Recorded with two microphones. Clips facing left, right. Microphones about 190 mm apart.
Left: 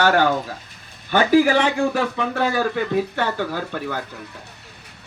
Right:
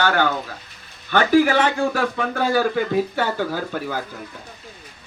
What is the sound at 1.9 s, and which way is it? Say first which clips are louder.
Speech: even; centre (ahead or behind).